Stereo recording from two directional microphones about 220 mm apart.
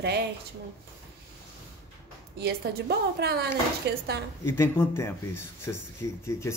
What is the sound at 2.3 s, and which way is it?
A woman's voice, 50° right (ahead or behind).